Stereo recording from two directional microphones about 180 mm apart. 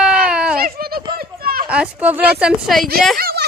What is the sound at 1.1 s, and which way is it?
Children playing, 55° right (ahead or behind).